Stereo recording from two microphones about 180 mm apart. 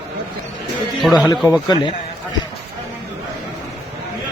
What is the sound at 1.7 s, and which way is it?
Speech, 25° left (ahead or behind).